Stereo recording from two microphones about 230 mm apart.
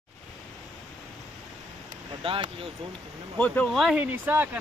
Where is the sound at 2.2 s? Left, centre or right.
Right.